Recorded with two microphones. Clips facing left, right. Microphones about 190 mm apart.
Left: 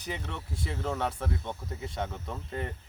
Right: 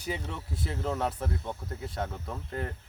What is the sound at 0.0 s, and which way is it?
Speech, 10° right (ahead or behind).